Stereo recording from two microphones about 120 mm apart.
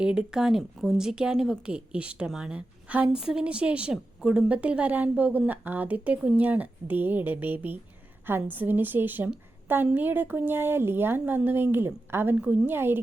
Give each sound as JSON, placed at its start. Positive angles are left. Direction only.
{"t": 0.0, "sound": "speech", "side_deg": -5}